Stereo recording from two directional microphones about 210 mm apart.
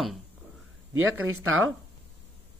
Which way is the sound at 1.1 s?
90° right.